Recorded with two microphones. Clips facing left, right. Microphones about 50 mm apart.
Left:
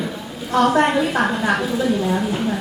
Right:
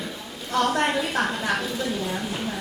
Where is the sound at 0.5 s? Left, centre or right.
Centre.